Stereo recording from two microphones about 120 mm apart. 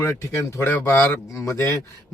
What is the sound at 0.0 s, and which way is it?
Speech, 25° left (ahead or behind).